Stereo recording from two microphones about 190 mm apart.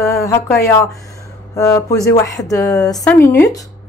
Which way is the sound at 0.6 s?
15° left (ahead or behind).